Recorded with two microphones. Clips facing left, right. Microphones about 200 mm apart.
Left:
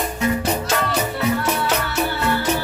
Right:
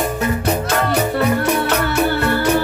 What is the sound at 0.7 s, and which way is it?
Music, 55° right (ahead or behind).